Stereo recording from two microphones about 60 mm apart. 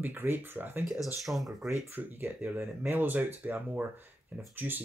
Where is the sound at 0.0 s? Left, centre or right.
Right.